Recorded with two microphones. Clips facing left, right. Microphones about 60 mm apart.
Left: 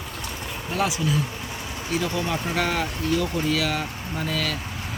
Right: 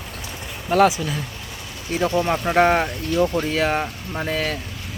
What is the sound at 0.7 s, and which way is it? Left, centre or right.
Speech, right.